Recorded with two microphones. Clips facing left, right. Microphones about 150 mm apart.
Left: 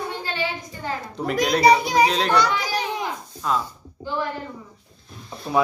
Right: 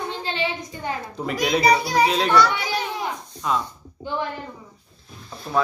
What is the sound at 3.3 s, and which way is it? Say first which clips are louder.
Speech: even; centre (ahead or behind).